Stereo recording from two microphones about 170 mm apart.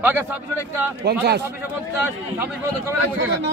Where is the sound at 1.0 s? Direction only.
70° right (ahead or behind).